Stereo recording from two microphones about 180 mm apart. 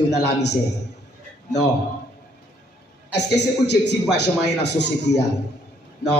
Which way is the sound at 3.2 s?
70° left (ahead or behind).